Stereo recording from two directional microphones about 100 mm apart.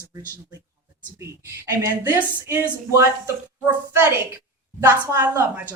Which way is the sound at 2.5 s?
30° right (ahead or behind).